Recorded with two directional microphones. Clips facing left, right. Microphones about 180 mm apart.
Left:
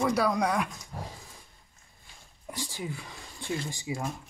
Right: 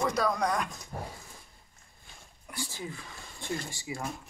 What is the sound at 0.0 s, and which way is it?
Speech, 10° left (ahead or behind).